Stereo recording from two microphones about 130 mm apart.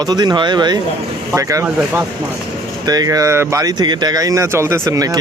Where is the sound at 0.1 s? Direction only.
30° right (ahead or behind).